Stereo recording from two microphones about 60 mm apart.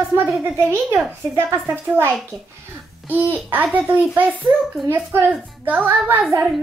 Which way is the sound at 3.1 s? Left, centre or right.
Right.